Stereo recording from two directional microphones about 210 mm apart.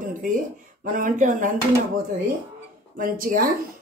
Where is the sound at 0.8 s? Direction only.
40° right (ahead or behind).